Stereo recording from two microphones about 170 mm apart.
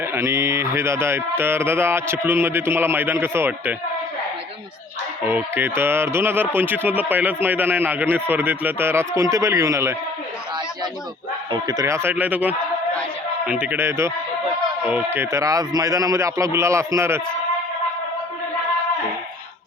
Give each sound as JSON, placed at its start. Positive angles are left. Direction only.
{"t": 0.0, "sound": "speech", "side_deg": -15}
{"t": 5.2, "sound": "speech", "side_deg": -10}
{"t": 11.5, "sound": "speech", "side_deg": -20}